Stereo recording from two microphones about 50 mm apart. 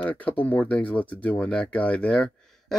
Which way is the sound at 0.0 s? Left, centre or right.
Left.